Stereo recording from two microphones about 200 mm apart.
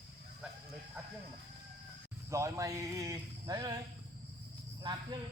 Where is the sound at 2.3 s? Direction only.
15° right (ahead or behind).